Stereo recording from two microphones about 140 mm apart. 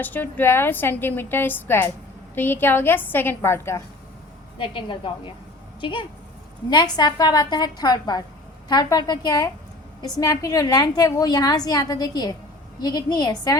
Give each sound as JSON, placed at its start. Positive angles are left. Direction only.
{"t": 0.0, "sound": "a woman's voice", "side_deg": 15}
{"t": 4.5, "sound": "a woman's voice", "side_deg": 35}